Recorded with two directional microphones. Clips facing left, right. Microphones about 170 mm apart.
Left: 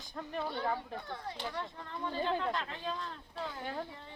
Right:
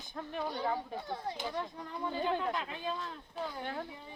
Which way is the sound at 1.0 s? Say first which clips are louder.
Right 4 dB; 25° right (ahead or behind).